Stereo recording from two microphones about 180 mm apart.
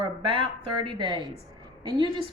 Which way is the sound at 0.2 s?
30° right (ahead or behind).